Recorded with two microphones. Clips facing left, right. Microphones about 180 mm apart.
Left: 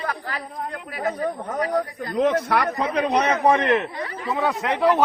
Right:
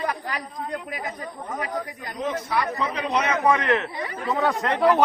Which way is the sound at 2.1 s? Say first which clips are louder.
Left 6 dB; 70° left (ahead or behind).